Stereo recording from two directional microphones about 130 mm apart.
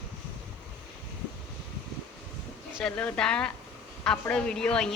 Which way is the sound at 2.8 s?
10° left (ahead or behind).